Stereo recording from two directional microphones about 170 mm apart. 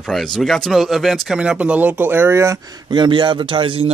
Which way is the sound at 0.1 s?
Centre (ahead or behind).